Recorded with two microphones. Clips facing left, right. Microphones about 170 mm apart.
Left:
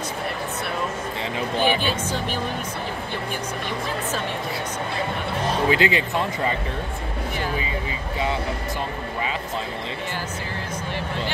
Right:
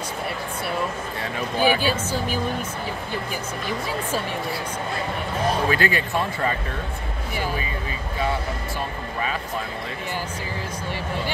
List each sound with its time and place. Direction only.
1.6 s speech: 10° right (ahead or behind)
5.7 s speech: 20° left (ahead or behind)